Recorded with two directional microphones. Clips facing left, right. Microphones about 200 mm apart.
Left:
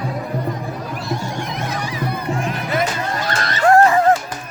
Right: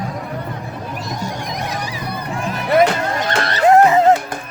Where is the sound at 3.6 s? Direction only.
20° right (ahead or behind).